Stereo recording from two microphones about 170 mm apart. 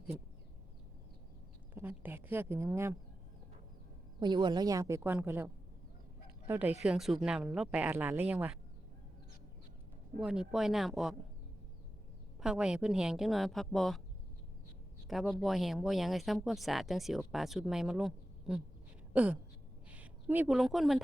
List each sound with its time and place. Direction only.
1.7 s a sound: 10° right (ahead or behind)
4.2 s a woman's voice: 25° right (ahead or behind)
6.5 s speech: 10° right (ahead or behind)
10.2 s speech: 5° right (ahead or behind)
12.4 s speech: 5° right (ahead or behind)
15.0 s a woman's voice: centre (ahead or behind)